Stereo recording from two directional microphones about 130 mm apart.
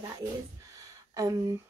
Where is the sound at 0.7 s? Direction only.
25° right (ahead or behind).